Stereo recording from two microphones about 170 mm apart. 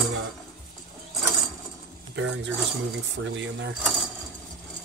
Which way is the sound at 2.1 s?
90° right.